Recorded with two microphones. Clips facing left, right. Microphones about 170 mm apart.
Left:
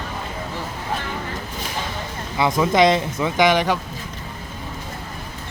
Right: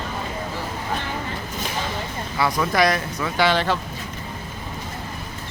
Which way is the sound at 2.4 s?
20° left (ahead or behind).